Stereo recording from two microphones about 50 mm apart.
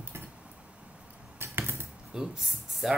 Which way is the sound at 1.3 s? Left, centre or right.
Right.